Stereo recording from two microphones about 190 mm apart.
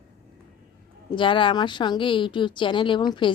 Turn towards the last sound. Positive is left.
turn(degrees=25)  # may be behind; listen again after turning